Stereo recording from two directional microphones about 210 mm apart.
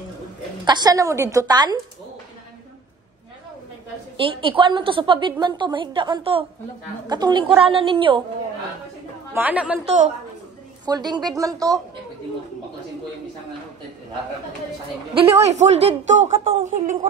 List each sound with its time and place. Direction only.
0.7 s a woman's voice: 20° right (ahead or behind)
4.2 s a woman's voice: 25° right (ahead or behind)
9.3 s a woman's voice: 10° right (ahead or behind)
10.9 s a woman's voice: 20° right (ahead or behind)
15.1 s a woman's voice: 30° right (ahead or behind)